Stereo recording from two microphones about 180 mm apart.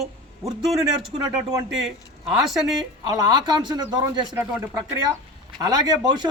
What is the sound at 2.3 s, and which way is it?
Speech, centre (ahead or behind).